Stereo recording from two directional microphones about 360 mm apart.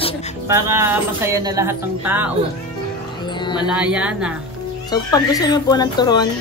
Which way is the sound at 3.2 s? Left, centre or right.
Centre.